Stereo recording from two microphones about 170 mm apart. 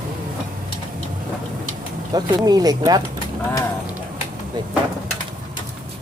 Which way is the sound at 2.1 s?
25° right (ahead or behind).